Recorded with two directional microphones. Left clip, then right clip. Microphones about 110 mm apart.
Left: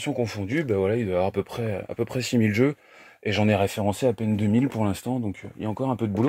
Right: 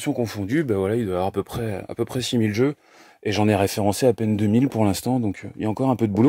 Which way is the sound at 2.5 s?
10° right (ahead or behind).